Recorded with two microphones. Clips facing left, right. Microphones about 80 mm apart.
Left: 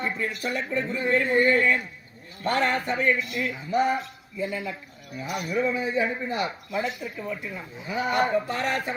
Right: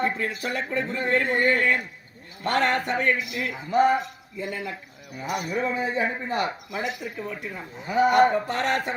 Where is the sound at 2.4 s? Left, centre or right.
Right.